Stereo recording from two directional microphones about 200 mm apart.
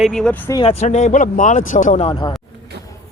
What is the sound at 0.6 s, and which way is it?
Speech, 30° left (ahead or behind).